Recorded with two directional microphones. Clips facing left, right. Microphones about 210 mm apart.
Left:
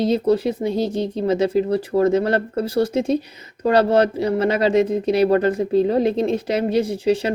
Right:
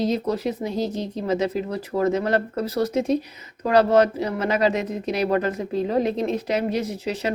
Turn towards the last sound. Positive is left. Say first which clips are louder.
# left 7 dB
turn(degrees=30)  # may be behind; listen again after turning